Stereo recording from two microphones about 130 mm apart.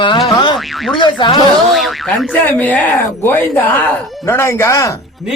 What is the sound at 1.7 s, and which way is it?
Speech, centre (ahead or behind).